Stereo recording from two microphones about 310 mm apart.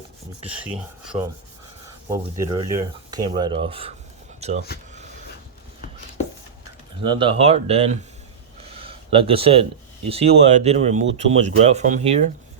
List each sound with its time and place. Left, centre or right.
0.4 s filing: centre
2.0 s speech: centre
7.0 s speech: centre
8.6 s a sound: centre
10.1 s speech: centre